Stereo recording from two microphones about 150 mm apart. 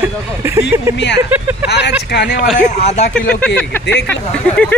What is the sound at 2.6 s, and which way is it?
Speech, 50° left (ahead or behind).